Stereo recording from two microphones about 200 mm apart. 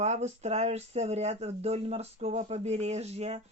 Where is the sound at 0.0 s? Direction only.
35° right (ahead or behind).